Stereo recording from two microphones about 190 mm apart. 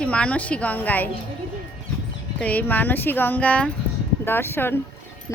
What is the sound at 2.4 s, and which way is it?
A woman's voice, 10° left (ahead or behind).